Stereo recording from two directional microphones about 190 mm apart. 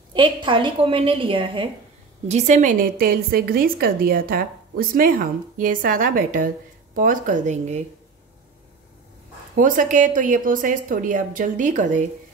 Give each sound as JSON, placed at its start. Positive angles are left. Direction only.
{"t": 0.1, "sound": "a woman's voice", "side_deg": -25}
{"t": 9.6, "sound": "a woman's voice", "side_deg": -45}